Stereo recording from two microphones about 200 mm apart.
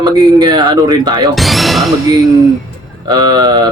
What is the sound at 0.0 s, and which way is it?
Speech, 20° right (ahead or behind).